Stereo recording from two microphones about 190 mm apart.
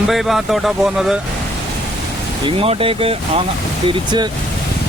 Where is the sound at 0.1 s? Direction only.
Centre (ahead or behind).